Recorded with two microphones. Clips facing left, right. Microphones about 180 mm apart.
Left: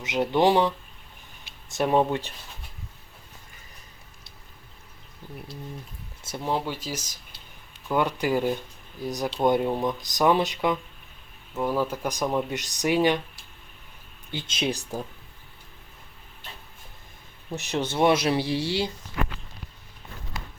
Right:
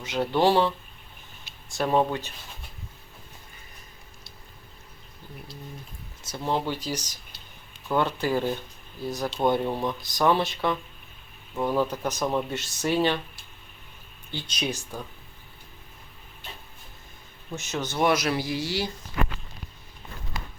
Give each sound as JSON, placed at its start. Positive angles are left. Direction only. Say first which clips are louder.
{"t": 0.0, "sound": "speech", "louder": "left 1 dB", "side_deg": 20}
{"t": 1.7, "sound": "speech", "louder": "left 1 dB", "side_deg": 20}
{"t": 6.4, "sound": "speech", "louder": "right 1 dB", "side_deg": 5}
{"t": 11.5, "sound": "speech", "louder": "right 1 dB", "side_deg": 5}
{"t": 14.3, "sound": "speech", "louder": "left 3 dB", "side_deg": 20}
{"t": 17.5, "sound": "speech", "louder": "left 3 dB", "side_deg": 30}